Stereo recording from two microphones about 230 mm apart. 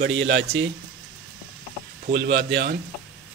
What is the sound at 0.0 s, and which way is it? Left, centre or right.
Speech, right.